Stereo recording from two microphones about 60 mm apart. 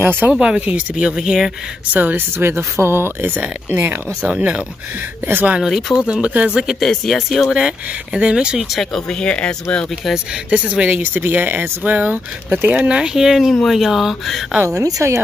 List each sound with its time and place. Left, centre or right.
0.0 s speech: right
0.3 s speech: centre
1.1 s speech: centre
2.0 s speech: right
2.3 s speech: right
4.2 s speech: right
5.6 s speech: centre
6.2 s speech: right
6.8 s speech: centre
7.5 s speech: centre
8.7 s speech: centre
11.1 s speech: right; by 14.4 s centre
14.7 s speech: right